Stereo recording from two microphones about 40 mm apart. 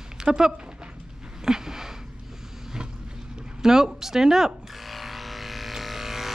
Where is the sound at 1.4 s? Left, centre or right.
Centre.